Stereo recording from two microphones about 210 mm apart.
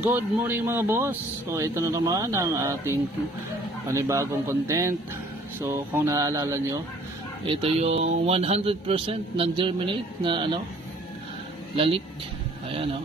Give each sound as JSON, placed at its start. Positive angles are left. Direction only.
{"t": 0.0, "sound": "speech", "side_deg": -10}
{"t": 7.4, "sound": "speech", "side_deg": -25}
{"t": 11.7, "sound": "speech", "side_deg": -25}